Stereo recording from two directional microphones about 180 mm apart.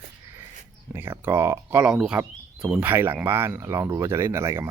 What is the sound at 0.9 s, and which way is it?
Speech, 10° right (ahead or behind).